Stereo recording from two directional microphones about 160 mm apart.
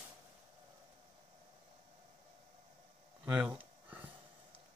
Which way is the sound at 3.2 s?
10° right (ahead or behind).